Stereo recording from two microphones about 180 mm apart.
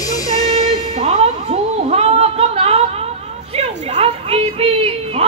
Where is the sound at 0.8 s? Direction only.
35° right (ahead or behind).